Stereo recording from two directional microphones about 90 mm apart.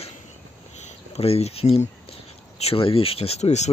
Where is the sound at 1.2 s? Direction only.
90° left.